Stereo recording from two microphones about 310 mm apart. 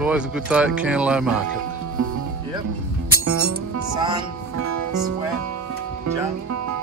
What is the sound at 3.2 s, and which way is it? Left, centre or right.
Music, right.